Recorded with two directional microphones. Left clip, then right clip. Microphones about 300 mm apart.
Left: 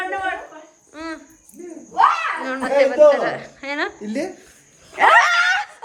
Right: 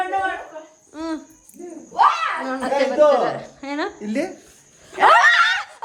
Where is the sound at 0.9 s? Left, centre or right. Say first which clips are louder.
Right 3 dB; centre.